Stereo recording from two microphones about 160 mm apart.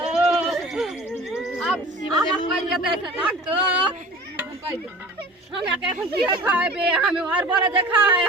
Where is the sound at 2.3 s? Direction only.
Centre (ahead or behind).